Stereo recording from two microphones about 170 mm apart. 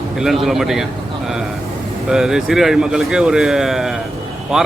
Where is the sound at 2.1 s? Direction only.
5° right (ahead or behind).